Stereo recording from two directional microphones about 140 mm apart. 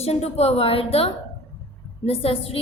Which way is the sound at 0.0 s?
50° left (ahead or behind).